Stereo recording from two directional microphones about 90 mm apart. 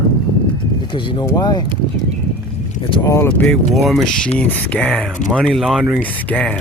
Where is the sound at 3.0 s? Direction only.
35° left (ahead or behind).